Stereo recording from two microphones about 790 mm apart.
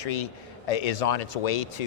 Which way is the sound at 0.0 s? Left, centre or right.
Left.